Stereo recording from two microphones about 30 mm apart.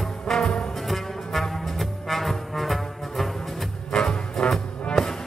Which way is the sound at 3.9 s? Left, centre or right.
Left.